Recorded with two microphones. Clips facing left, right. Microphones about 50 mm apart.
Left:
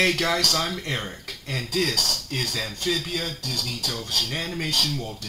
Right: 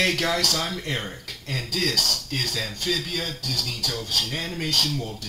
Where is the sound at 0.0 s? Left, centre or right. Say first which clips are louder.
Left 1 dB; centre.